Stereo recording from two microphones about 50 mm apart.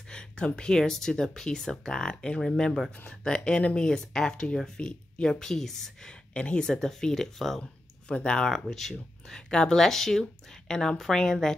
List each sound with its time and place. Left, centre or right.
0.1 s a sound: centre
0.6 s speech: centre
6.0 s speech: left
6.6 s speech: centre
8.1 s speech: centre
8.5 s speech: centre
9.5 s speech: centre